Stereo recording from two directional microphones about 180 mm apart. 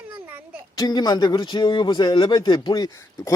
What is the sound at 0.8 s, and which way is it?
Speech, 20° left (ahead or behind).